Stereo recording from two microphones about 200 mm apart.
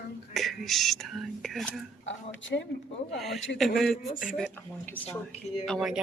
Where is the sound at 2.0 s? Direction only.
65° left (ahead or behind).